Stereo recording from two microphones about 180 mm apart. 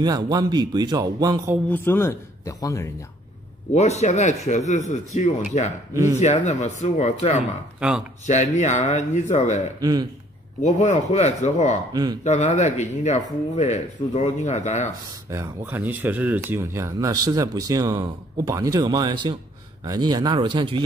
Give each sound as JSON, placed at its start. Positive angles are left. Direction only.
{"t": 0.0, "sound": "speech", "side_deg": -20}
{"t": 1.7, "sound": "a man's voice", "side_deg": 10}
{"t": 3.7, "sound": "speech", "side_deg": 40}
{"t": 9.8, "sound": "speech", "side_deg": -20}
{"t": 10.6, "sound": "speech", "side_deg": 40}
{"t": 11.9, "sound": "speech", "side_deg": -20}
{"t": 12.2, "sound": "speech", "side_deg": 40}
{"t": 15.2, "sound": "speech", "side_deg": -15}